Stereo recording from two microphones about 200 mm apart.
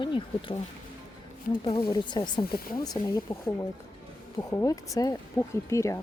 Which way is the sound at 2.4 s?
50° left (ahead or behind).